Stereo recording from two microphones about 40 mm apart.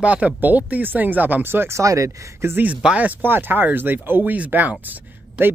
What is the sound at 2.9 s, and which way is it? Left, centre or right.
Speech, right.